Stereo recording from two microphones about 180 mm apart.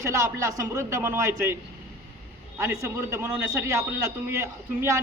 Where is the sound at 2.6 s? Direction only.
15° right (ahead or behind).